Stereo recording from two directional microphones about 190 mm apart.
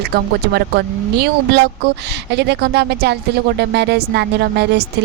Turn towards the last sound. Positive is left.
turn(degrees=-60)  # may be behind; listen again after turning